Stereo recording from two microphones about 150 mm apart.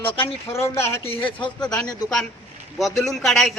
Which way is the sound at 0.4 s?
15° left (ahead or behind).